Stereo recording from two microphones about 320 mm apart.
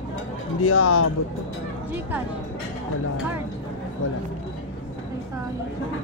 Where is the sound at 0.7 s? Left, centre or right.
Left.